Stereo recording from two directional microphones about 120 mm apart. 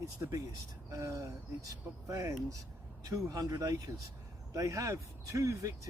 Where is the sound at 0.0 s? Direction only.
30° right (ahead or behind).